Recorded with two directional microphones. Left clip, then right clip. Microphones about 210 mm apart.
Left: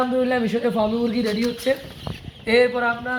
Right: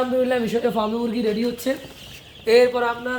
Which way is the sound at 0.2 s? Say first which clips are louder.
Right 1 dB; 20° right (ahead or behind).